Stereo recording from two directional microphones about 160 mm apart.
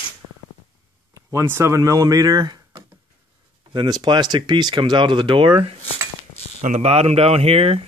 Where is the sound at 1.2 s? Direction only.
15° right (ahead or behind); by 5.7 s 35° right (ahead or behind).